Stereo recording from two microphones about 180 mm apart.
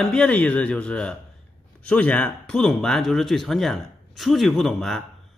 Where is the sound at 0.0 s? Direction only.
5° left (ahead or behind).